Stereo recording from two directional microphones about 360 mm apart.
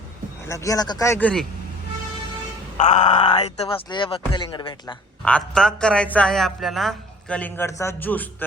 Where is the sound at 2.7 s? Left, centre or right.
Centre.